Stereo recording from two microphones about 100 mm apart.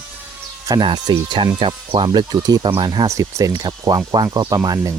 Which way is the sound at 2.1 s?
45° right (ahead or behind).